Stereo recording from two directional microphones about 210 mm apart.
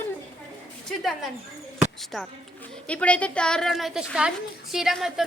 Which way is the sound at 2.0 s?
Centre (ahead or behind).